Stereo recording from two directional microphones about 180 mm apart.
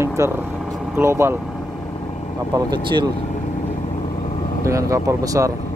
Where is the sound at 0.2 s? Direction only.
15° right (ahead or behind).